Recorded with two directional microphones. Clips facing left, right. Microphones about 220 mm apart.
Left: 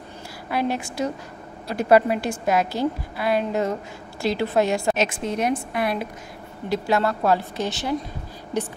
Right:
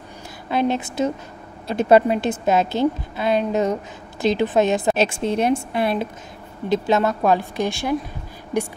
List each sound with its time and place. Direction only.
0.5 s a woman's voice: 20° right (ahead or behind)